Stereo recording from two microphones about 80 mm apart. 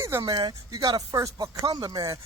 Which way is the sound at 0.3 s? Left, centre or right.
Right.